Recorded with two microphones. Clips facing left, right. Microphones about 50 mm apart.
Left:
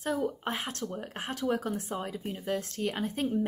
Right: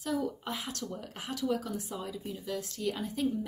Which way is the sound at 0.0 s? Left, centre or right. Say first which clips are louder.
Left 2 dB; left.